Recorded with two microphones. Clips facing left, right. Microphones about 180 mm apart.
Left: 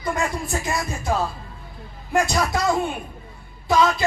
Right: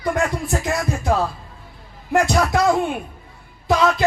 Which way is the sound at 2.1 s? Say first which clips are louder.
Right 3 dB; 60° right (ahead or behind).